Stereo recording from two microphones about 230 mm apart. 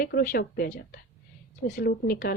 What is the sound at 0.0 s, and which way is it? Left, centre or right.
Speech, left.